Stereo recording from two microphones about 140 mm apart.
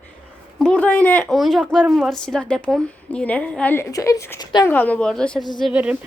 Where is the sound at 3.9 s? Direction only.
25° left (ahead or behind); by 6.0 s 10° right (ahead or behind).